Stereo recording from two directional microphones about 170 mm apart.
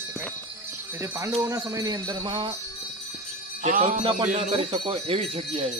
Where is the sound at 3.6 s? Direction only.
45° right (ahead or behind).